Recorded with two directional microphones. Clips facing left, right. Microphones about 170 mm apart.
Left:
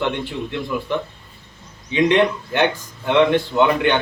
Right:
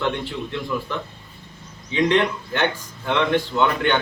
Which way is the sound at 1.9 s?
15° left (ahead or behind).